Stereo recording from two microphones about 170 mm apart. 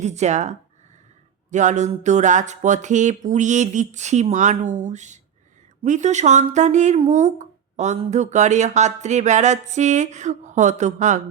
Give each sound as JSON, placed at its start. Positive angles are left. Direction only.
{"t": 0.0, "sound": "speech", "side_deg": -40}